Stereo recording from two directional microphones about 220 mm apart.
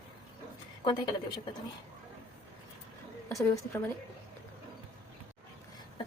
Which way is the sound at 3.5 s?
10° left (ahead or behind).